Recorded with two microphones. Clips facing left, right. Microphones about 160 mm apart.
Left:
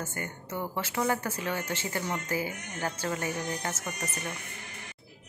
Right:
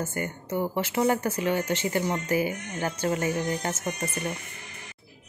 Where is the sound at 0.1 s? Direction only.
20° right (ahead or behind).